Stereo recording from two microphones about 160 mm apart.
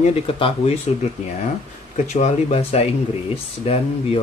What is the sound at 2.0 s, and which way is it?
Speech, 45° left (ahead or behind).